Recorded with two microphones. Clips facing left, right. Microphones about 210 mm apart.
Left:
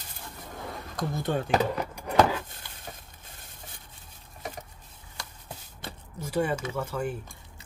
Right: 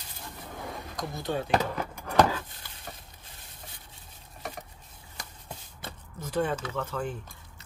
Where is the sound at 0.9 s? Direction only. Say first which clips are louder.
Left 3 dB; 50° left (ahead or behind).